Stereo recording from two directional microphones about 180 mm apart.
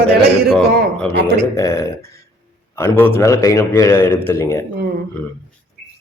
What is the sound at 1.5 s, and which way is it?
A man's voice, 15° left (ahead or behind).